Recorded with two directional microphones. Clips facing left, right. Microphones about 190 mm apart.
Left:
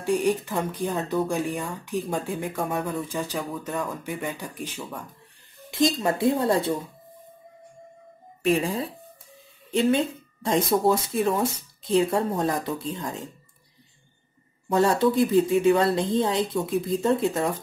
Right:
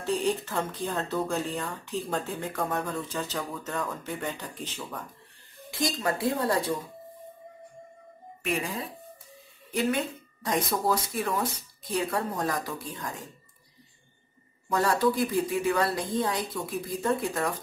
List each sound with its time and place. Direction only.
0.0 s speech: 15° left (ahead or behind)
5.7 s speech: 20° left (ahead or behind)
8.4 s speech: 30° left (ahead or behind)
14.7 s speech: 25° left (ahead or behind)